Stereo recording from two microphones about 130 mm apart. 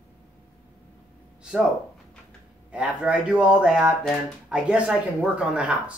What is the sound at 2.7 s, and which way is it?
Speech, 10° right (ahead or behind).